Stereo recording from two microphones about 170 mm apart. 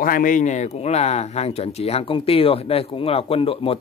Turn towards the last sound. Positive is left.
turn(degrees=35)  # may be behind; listen again after turning